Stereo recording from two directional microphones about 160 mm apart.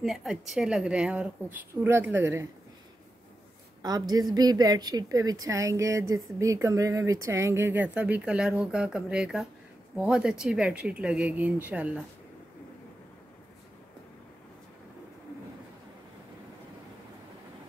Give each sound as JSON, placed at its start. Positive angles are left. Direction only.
{"t": 0.0, "sound": "a woman's voice", "side_deg": 0}
{"t": 3.8, "sound": "a woman's voice", "side_deg": -25}